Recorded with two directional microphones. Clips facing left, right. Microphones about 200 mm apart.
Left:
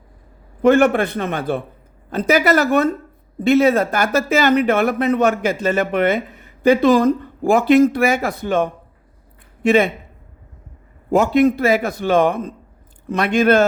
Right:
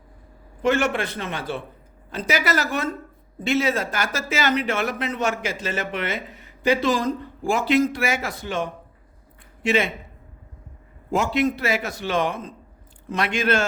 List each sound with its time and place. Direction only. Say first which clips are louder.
0.6 s speech: left 8 dB; 55° left (ahead or behind)
11.1 s a man's voice: left 8 dB; 55° left (ahead or behind)